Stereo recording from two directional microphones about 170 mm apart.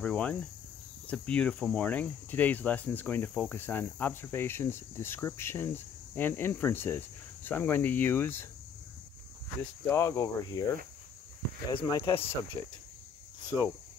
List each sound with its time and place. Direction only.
0.0 s speech: 5° left (ahead or behind)
9.6 s speech: 15° left (ahead or behind)
11.7 s speech: 30° left (ahead or behind)
12.6 s speech: 20° left (ahead or behind)